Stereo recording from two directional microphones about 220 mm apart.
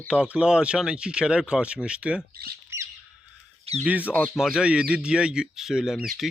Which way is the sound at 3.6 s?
30° right (ahead or behind).